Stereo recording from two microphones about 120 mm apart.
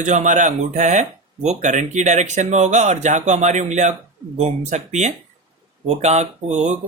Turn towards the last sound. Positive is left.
turn(degrees=-70)  # may be behind; listen again after turning